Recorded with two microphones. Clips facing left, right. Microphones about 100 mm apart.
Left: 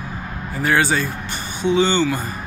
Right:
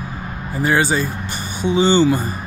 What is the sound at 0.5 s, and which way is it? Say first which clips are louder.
Speech: right 1 dB; 10° right (ahead or behind).